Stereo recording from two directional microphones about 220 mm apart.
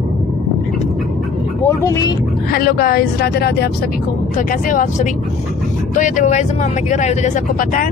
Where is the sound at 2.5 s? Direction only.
45° left (ahead or behind).